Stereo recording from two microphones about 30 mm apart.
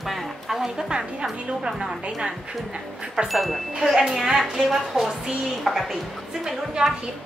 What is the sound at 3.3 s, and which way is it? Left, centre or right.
Speech, centre.